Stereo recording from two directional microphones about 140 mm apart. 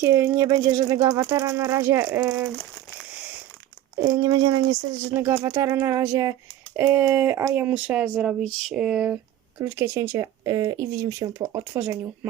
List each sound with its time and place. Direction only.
0.0 s speech: 20° right (ahead or behind)
4.0 s speech: 25° right (ahead or behind)
5.0 s speech: 15° right (ahead or behind)
9.6 s speech: 15° right (ahead or behind)